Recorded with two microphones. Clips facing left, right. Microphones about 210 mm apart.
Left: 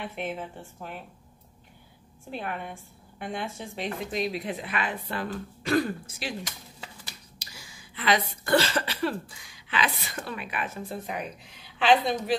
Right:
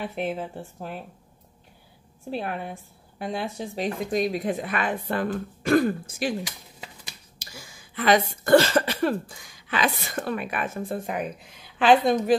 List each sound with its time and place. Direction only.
0.1 s speech: 40° right (ahead or behind)
2.3 s speech: 35° right (ahead or behind)
7.3 s speech: 50° right (ahead or behind)